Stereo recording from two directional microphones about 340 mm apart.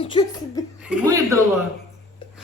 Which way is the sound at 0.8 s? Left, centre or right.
Centre.